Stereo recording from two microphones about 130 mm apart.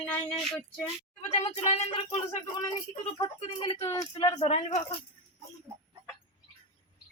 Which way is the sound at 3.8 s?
25° left (ahead or behind).